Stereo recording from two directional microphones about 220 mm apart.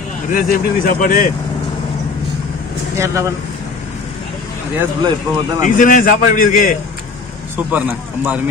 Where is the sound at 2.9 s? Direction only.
15° right (ahead or behind).